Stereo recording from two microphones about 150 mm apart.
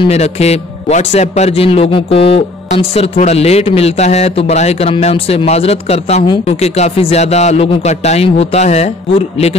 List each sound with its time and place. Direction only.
0.0 s a man's voice: 45° left (ahead or behind)
6.2 s speech: 30° left (ahead or behind)
6.5 s a man's voice: 45° left (ahead or behind)